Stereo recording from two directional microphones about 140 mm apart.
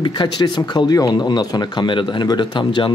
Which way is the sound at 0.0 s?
35° left (ahead or behind).